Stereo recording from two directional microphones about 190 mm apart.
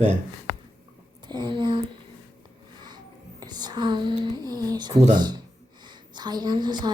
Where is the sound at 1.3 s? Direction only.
25° right (ahead or behind).